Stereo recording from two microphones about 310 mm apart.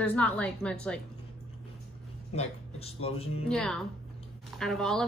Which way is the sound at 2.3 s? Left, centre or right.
Centre.